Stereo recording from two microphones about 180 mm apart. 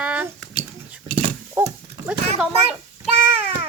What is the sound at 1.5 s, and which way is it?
Dog, 15° right (ahead or behind).